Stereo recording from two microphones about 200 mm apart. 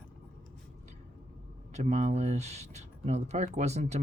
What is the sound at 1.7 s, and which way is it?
Speech, 35° right (ahead or behind).